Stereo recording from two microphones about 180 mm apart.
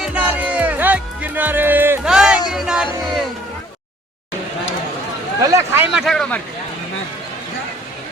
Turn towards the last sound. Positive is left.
turn(degrees=5)  # may be behind; listen again after turning